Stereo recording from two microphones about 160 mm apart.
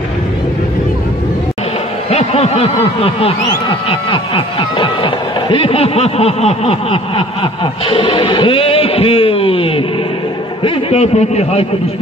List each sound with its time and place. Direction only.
2.0 s snicker: 40° left (ahead or behind)
7.8 s a sound: 35° left (ahead or behind)
10.6 s a man's voice: 40° left (ahead or behind)